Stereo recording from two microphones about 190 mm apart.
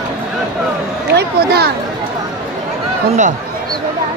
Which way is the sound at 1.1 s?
55° right (ahead or behind).